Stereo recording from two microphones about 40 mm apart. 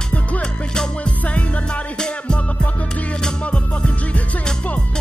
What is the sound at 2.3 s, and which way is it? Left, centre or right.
Music, centre.